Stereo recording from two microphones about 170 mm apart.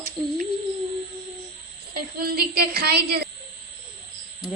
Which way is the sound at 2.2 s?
60° right (ahead or behind).